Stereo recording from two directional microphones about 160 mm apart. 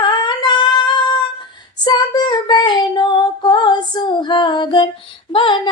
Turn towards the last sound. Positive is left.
turn(degrees=30)  # may be behind; listen again after turning